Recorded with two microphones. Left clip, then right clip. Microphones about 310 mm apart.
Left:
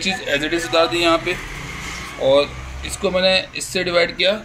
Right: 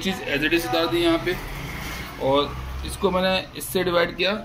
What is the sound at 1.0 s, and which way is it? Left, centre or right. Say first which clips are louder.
Speech: left 5 dB; centre.